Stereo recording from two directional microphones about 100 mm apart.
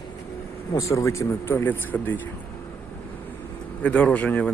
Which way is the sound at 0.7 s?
30° left (ahead or behind).